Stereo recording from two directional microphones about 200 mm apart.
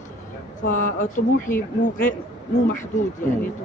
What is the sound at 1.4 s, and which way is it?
Speech, 10° left (ahead or behind).